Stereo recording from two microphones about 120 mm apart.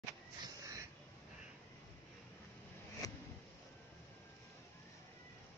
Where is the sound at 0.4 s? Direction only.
30° right (ahead or behind).